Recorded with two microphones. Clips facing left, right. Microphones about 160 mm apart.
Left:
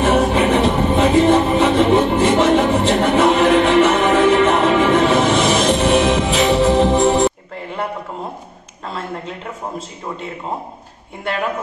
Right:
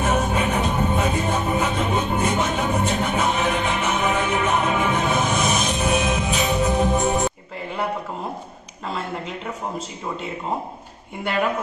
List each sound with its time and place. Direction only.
0.0 s music: 90° left